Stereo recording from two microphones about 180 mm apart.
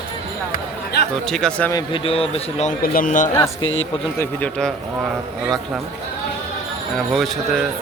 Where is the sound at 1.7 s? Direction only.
30° left (ahead or behind).